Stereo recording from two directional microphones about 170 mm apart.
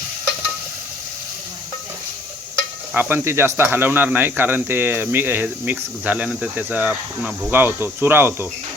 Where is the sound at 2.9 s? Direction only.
10° right (ahead or behind).